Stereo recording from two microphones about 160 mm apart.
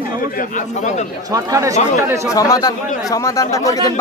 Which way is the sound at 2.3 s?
20° left (ahead or behind).